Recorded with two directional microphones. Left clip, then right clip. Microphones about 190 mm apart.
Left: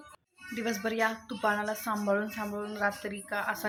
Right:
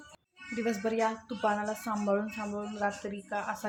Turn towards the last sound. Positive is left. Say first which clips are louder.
# left 2 dB
turn(degrees=0)  # may be behind; listen again after turning